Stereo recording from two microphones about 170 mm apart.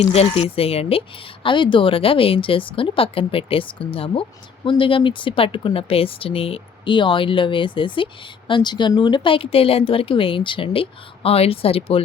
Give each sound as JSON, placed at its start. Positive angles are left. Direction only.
{"t": 0.0, "sound": "speech", "side_deg": 35}